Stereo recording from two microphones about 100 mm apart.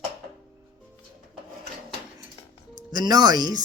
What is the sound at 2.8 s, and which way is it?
Speech, 45° right (ahead or behind).